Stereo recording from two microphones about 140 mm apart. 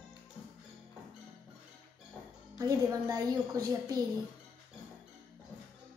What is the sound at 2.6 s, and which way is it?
A woman's voice, 25° right (ahead or behind).